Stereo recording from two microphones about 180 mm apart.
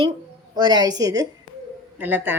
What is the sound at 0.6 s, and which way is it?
A woman's voice, 25° right (ahead or behind).